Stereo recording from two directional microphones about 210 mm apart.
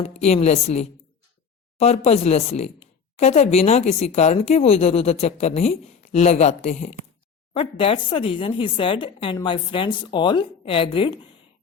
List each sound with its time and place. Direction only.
0.0 s speech: 30° left (ahead or behind)